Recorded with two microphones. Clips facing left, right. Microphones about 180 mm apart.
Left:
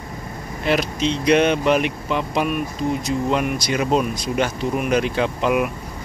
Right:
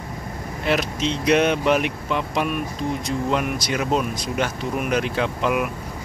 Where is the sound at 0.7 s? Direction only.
Centre (ahead or behind).